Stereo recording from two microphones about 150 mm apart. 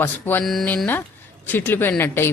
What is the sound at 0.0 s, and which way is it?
Speech, 15° left (ahead or behind).